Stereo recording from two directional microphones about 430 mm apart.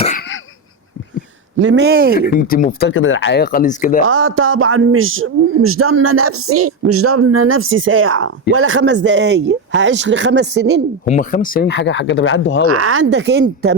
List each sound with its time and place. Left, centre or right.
1.5 s speech: right
2.1 s speech: centre
4.0 s speech: right
11.0 s speech: centre
12.8 s speech: right